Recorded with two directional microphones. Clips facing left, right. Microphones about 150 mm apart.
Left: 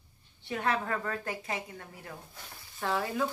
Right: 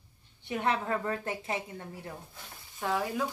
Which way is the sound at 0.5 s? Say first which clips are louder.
Right 1 dB; 20° right (ahead or behind).